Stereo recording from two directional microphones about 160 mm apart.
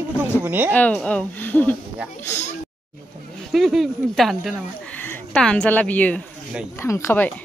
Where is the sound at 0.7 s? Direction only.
10° left (ahead or behind).